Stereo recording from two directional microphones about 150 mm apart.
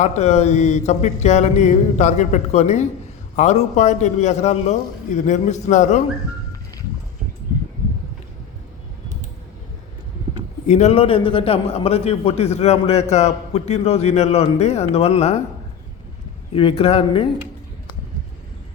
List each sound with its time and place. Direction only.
0.0 s a man's voice: 45° left (ahead or behind)
10.7 s a man's voice: 45° left (ahead or behind)
16.5 s speech: 35° left (ahead or behind)